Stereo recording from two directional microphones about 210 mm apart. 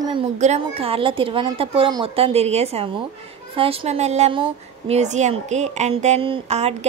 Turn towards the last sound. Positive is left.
turn(degrees=-30)  # may be behind; listen again after turning